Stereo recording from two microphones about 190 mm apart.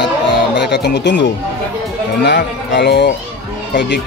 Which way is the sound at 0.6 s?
60° left (ahead or behind).